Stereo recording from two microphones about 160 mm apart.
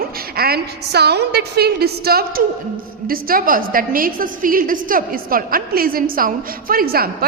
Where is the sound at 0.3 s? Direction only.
75° right (ahead or behind).